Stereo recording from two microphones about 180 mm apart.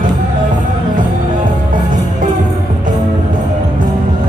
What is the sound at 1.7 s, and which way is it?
Music, 45° right (ahead or behind).